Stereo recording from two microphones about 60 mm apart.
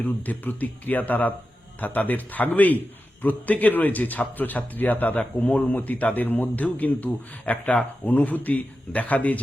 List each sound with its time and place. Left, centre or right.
0.0 s a man's voice: left